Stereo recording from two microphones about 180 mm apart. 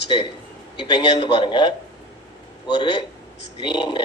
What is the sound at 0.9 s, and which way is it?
Speech, 25° left (ahead or behind).